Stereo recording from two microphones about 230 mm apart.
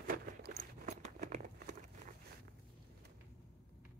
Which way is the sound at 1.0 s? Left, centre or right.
Right.